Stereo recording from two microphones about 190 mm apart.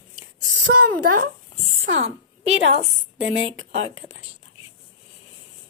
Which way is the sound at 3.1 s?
80° right.